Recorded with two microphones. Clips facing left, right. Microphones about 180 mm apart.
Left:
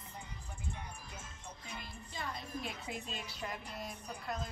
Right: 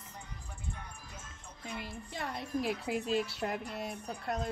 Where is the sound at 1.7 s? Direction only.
70° right (ahead or behind).